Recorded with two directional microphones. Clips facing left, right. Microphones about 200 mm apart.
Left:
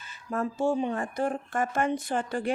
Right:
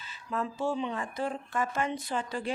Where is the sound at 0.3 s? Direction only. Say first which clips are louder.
Left 4 dB; 45° left (ahead or behind).